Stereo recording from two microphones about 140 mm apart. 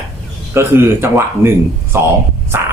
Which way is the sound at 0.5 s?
15° right (ahead or behind).